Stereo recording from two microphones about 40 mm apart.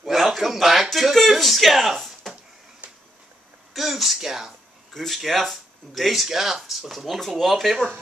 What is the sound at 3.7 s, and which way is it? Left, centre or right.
Speech, centre.